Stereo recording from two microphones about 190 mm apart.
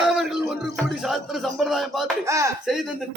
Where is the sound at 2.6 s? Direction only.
Centre (ahead or behind).